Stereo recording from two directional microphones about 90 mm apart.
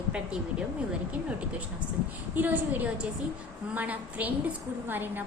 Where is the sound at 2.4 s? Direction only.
20° right (ahead or behind).